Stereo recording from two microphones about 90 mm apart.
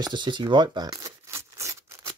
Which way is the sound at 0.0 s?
60° right (ahead or behind).